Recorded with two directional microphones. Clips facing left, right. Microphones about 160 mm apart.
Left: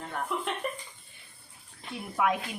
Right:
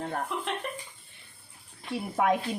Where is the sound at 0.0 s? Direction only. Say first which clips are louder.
Right 3 dB; 40° right (ahead or behind).